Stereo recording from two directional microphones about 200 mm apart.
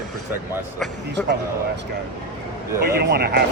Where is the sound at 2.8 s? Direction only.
50° right (ahead or behind).